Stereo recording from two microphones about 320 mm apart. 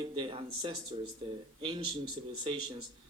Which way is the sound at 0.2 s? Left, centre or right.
Centre.